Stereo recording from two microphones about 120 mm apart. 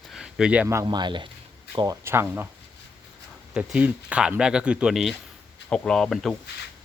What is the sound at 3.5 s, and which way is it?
Speech, 10° right (ahead or behind).